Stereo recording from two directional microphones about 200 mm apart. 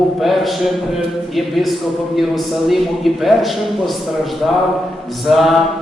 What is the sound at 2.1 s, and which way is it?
A man's voice, centre (ahead or behind).